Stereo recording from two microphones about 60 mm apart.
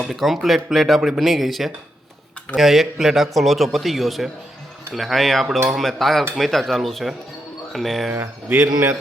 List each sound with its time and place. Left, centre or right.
0.1 s a man's voice: centre
8.4 s a man's voice: right